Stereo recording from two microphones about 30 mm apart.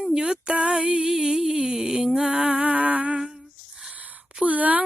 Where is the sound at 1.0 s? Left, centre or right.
Right.